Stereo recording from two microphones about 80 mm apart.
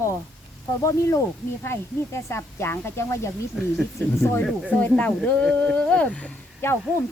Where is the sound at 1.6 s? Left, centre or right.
Left.